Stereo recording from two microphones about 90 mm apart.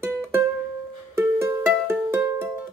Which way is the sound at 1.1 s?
25° right (ahead or behind).